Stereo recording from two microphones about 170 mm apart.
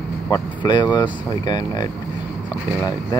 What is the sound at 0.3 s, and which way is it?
Speech, 25° left (ahead or behind).